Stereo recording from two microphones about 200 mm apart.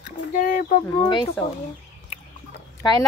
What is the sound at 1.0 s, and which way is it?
Speech, 20° left (ahead or behind).